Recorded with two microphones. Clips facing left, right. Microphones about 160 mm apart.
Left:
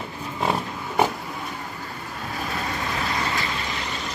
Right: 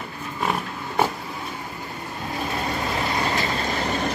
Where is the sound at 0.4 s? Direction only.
25° left (ahead or behind).